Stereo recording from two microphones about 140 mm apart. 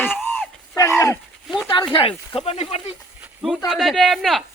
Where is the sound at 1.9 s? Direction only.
40° left (ahead or behind).